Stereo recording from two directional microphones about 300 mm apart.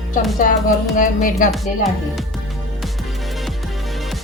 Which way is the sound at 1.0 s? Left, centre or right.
Left.